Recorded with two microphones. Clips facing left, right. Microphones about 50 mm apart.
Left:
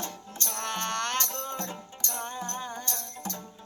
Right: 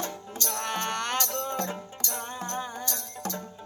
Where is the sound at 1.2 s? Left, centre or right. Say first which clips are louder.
Right 4 dB; right.